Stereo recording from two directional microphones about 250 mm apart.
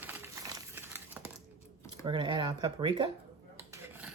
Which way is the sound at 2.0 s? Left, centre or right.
Centre.